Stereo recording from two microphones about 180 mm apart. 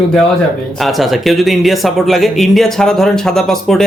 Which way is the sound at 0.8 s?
Centre (ahead or behind).